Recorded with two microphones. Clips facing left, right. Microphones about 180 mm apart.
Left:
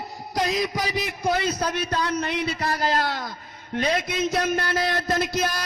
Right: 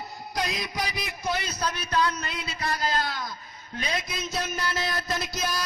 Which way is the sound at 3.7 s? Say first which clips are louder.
Left 8 dB; 60° left (ahead or behind).